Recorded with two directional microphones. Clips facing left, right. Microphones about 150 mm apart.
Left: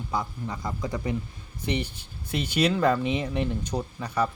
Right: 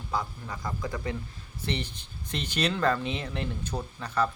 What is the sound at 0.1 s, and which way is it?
Speech, 20° left (ahead or behind).